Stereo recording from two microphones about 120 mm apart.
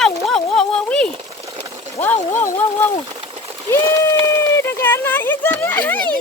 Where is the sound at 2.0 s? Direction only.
15° left (ahead or behind).